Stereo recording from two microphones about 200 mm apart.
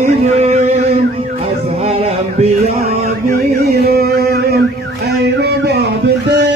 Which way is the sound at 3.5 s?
50° right (ahead or behind).